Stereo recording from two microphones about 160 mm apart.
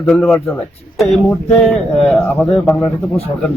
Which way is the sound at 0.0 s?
10° left (ahead or behind).